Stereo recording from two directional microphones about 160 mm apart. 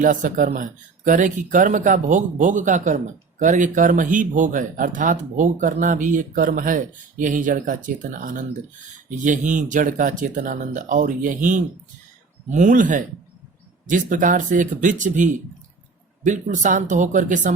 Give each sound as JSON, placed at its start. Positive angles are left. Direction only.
{"t": 0.0, "sound": "speech", "side_deg": -55}